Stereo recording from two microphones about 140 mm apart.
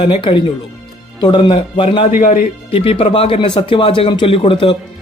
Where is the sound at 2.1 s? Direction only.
70° left (ahead or behind).